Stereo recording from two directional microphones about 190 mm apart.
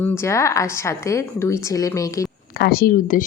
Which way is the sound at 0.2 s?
15° left (ahead or behind).